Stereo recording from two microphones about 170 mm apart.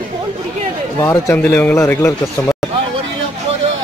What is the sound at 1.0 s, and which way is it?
Speech, 15° left (ahead or behind).